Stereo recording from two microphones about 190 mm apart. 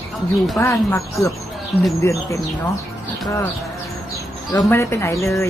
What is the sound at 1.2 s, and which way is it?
Speech, centre (ahead or behind).